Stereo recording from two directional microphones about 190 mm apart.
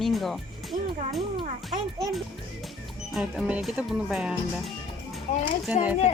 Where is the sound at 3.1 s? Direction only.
5° right (ahead or behind).